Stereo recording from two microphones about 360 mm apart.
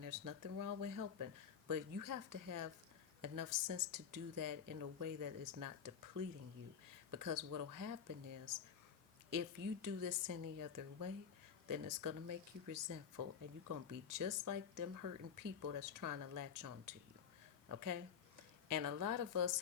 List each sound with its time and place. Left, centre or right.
0.0 s speech: right